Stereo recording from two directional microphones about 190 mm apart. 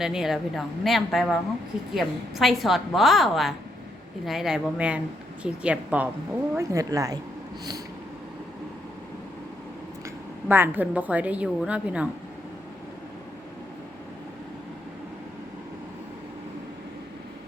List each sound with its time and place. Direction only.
0.0 s a woman's voice: centre (ahead or behind); by 7.2 s 20° right (ahead or behind)
10.5 s a woman's voice: 10° right (ahead or behind)